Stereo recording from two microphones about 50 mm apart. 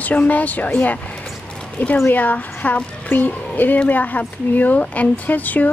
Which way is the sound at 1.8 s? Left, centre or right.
Left.